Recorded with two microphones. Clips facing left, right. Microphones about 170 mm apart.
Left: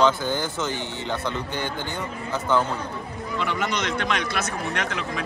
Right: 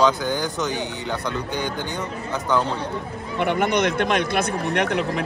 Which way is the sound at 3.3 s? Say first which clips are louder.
Right 6 dB; 55° right (ahead or behind).